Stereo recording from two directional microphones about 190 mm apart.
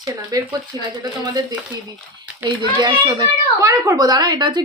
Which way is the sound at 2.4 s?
10° right (ahead or behind).